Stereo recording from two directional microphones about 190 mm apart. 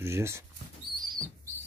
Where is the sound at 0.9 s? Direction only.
25° right (ahead or behind).